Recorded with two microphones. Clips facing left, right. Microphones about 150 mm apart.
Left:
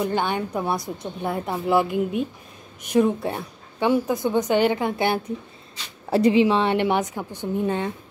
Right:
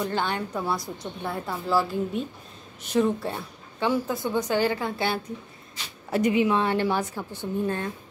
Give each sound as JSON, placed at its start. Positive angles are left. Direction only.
{"t": 0.0, "sound": "a woman's voice", "side_deg": 15}
{"t": 6.0, "sound": "a woman's voice", "side_deg": 30}